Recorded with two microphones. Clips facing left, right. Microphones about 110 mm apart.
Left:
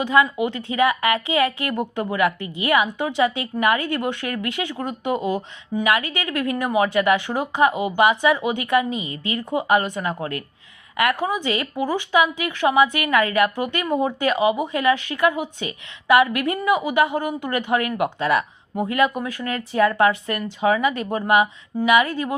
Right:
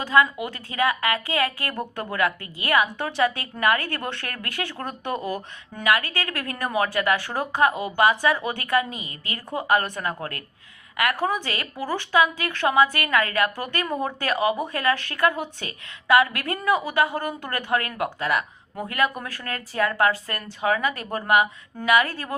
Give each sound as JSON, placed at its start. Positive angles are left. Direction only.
{"t": 0.0, "sound": "speech", "side_deg": 20}